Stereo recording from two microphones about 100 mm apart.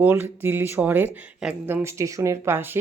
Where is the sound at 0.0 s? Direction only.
20° right (ahead or behind).